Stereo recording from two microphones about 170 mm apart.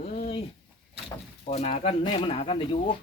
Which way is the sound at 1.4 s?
40° left (ahead or behind).